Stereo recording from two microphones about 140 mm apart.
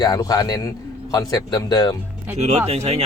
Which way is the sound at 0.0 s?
30° left (ahead or behind).